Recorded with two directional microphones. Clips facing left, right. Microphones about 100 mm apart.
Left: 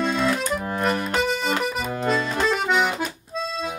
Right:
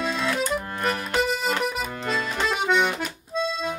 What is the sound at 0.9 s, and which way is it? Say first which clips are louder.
Music: left 2 dB; 35° left (ahead or behind).